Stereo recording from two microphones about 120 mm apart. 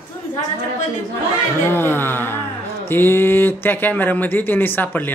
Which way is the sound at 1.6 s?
20° left (ahead or behind).